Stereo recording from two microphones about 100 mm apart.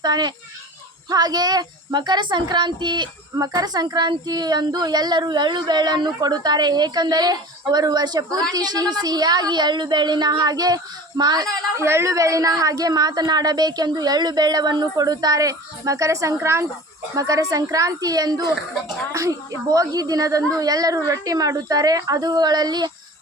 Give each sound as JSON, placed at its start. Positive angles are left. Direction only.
{"t": 0.0, "sound": "a child's voice", "side_deg": -45}
{"t": 11.8, "sound": "a woman's voice", "side_deg": -25}